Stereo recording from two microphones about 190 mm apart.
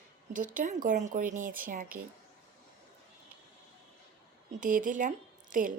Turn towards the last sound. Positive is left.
turn(degrees=-45)  # may be behind; listen again after turning